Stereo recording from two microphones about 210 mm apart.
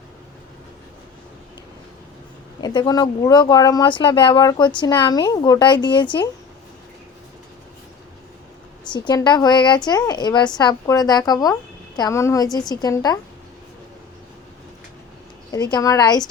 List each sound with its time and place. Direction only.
2.6 s speech: 20° left (ahead or behind)
8.9 s a woman's voice: 20° left (ahead or behind)
15.5 s a woman's voice: 15° left (ahead or behind)